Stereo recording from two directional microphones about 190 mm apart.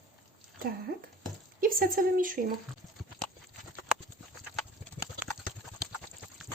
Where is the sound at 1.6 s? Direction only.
50° right (ahead or behind).